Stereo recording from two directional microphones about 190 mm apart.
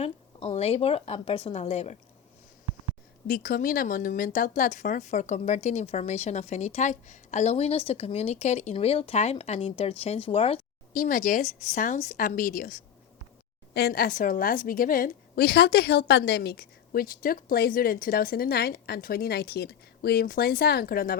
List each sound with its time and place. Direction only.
0.0 s speech: 30° left (ahead or behind)
3.2 s speech: 50° left (ahead or behind); by 10.6 s 30° left (ahead or behind)
10.9 s a woman's voice: 45° left (ahead or behind)